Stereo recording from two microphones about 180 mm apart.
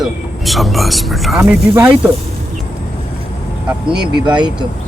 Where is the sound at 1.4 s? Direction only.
15° right (ahead or behind).